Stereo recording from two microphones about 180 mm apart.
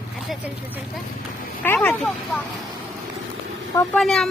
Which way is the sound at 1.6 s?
10° left (ahead or behind).